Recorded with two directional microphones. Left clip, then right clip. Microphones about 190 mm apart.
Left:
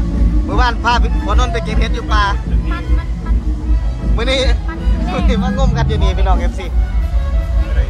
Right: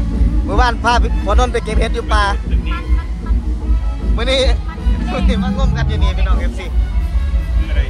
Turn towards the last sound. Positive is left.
turn(degrees=30)  # may be behind; listen again after turning